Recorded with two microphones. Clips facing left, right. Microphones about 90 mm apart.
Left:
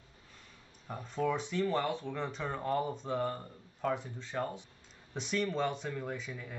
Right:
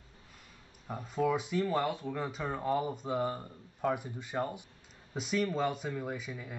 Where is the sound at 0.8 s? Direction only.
5° right (ahead or behind).